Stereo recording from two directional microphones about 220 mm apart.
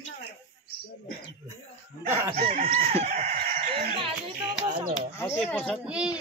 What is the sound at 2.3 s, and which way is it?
Chicken, 30° right (ahead or behind).